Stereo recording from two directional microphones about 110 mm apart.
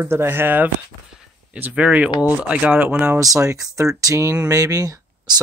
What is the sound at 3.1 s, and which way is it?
Speech, 30° right (ahead or behind).